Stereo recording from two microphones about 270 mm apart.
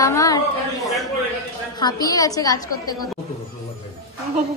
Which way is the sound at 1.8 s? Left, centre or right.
Centre.